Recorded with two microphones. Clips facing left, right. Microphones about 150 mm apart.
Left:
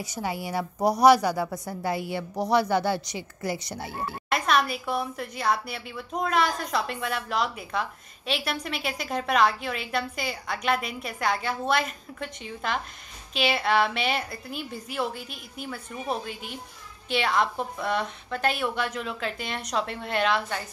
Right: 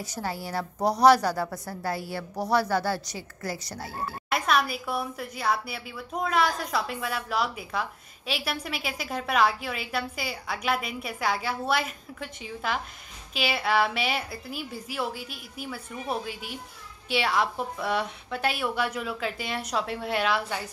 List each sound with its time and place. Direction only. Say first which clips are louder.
0.0 s a woman's voice: left 2 dB; 15° left (ahead or behind)
4.3 s a woman's voice: left 1 dB; 5° right (ahead or behind)